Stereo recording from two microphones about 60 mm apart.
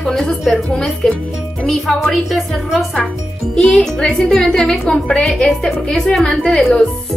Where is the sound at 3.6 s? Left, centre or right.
Centre.